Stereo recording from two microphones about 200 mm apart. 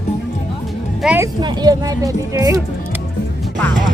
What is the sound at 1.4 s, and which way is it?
Speech, 20° right (ahead or behind).